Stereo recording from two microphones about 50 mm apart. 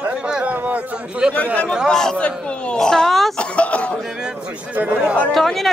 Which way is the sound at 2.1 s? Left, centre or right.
Left.